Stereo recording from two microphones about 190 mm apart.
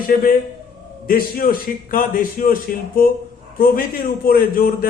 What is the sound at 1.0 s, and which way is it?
A man's voice, 50° left (ahead or behind).